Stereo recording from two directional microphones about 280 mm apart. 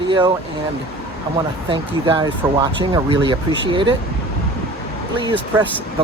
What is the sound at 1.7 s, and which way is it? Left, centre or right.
Speech, centre.